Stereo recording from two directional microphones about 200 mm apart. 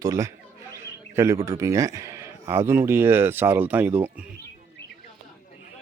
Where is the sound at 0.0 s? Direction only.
15° right (ahead or behind).